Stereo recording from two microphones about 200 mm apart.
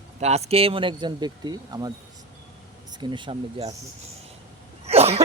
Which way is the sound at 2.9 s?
20° right (ahead or behind).